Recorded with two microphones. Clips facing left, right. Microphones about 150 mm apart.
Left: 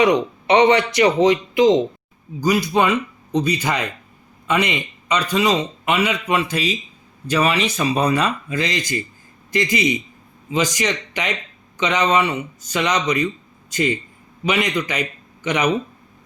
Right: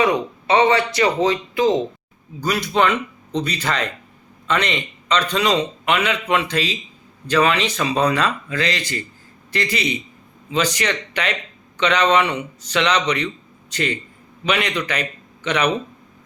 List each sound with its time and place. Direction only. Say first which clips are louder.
0.0 s a man's voice: left 3 dB; 15° left (ahead or behind)
13.2 s a sound: left 4 dB; 10° left (ahead or behind)
14.4 s a man's voice: left 1 dB; 10° left (ahead or behind)